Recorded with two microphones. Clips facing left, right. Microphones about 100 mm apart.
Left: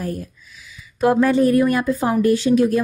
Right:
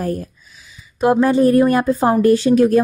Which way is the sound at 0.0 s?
45° right (ahead or behind).